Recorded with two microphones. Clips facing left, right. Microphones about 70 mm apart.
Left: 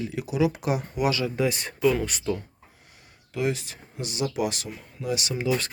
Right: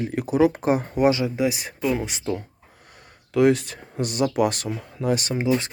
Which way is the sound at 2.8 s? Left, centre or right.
Right.